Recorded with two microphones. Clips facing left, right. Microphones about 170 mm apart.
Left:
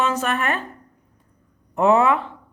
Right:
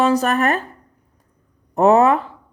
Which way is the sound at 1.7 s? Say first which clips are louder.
Right 4 dB; 40° right (ahead or behind).